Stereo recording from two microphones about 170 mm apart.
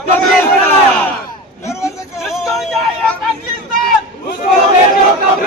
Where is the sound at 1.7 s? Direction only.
15° left (ahead or behind).